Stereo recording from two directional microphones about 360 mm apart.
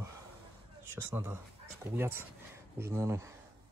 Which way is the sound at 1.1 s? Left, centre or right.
Centre.